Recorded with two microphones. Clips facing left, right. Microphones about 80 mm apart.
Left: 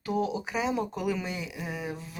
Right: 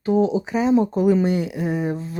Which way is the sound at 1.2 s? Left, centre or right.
Right.